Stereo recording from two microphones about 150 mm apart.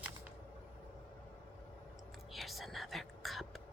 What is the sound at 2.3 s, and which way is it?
Whispering, centre (ahead or behind).